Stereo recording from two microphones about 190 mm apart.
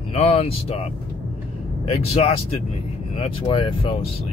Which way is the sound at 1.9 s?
30° left (ahead or behind).